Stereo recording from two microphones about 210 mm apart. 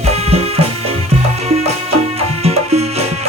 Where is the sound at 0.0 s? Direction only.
30° right (ahead or behind).